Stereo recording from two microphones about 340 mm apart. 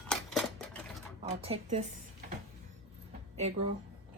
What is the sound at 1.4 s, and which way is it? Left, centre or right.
Speech, centre.